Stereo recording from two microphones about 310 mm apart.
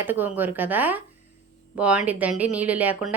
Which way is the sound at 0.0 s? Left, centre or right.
Centre.